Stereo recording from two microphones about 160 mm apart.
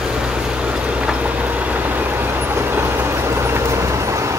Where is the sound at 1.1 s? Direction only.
10° right (ahead or behind).